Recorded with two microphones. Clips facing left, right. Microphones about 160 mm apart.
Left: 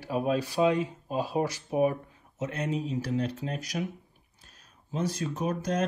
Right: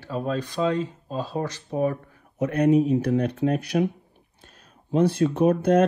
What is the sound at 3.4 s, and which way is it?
Speech, 30° right (ahead or behind).